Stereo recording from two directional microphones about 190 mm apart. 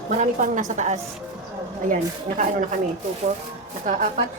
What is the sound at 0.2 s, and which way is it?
Speech, 40° right (ahead or behind).